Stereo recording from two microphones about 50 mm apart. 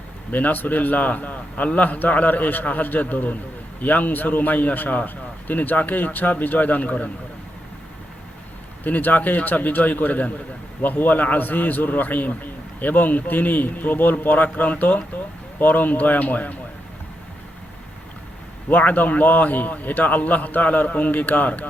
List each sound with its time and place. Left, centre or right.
0.3 s a man's voice: left
8.8 s a man's voice: left
18.7 s a man's voice: left